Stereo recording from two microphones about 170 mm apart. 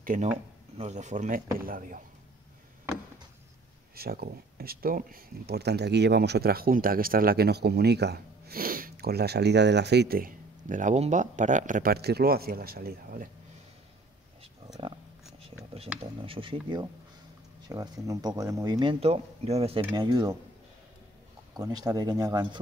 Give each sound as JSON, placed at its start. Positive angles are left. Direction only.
{"t": 0.0, "sound": "speech", "side_deg": -50}
{"t": 3.9, "sound": "speech", "side_deg": -65}
{"t": 15.4, "sound": "a sound", "side_deg": -35}
{"t": 16.0, "sound": "speech", "side_deg": -30}
{"t": 21.5, "sound": "speech", "side_deg": -20}